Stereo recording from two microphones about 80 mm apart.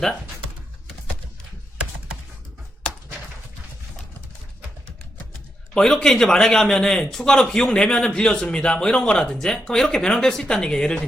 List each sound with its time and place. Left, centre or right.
5.7 s a man's voice: centre